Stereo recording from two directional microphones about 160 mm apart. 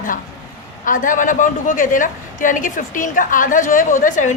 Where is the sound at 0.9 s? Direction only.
55° left (ahead or behind).